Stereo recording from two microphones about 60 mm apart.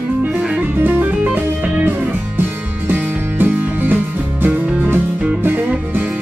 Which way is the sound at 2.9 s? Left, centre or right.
Right.